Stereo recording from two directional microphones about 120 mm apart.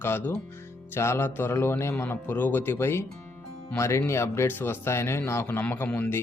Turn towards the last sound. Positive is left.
turn(degrees=15)  # may be behind; listen again after turning